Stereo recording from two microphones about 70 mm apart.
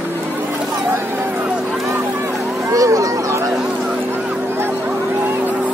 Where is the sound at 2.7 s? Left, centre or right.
Right.